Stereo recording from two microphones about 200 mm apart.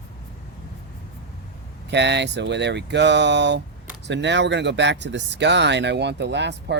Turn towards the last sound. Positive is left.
turn(degrees=-60)  # may be behind; listen again after turning